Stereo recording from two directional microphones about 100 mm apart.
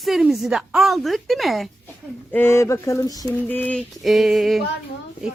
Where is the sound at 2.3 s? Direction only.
25° left (ahead or behind).